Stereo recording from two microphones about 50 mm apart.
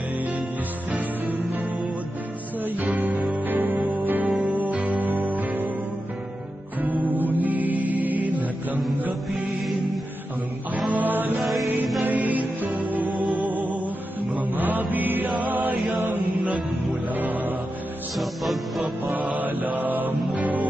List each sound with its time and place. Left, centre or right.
0.9 s music: right
2.6 s music: right
4.4 s music: right
7.0 s music: right
10.9 s music: right
11.3 s music: centre
12.0 s music: right
14.3 s mantra: right
16.0 s music: right
18.2 s music: centre
19.0 s music: right